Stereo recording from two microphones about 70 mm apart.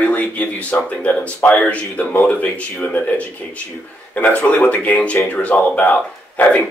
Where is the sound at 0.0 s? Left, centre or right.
Left.